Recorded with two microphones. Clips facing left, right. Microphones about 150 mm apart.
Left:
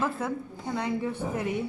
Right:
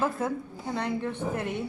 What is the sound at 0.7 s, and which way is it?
Speech, 10° left (ahead or behind).